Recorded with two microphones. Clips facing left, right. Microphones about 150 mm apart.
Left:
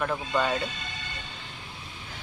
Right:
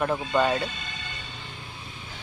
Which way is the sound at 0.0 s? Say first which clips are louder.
Right 3 dB; 20° right (ahead or behind).